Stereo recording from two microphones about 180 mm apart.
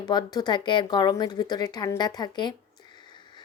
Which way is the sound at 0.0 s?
20° left (ahead or behind).